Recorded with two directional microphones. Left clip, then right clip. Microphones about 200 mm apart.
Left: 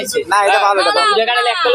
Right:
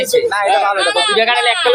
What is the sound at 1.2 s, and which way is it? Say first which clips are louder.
Speech: right 1 dB; 5° right (ahead or behind).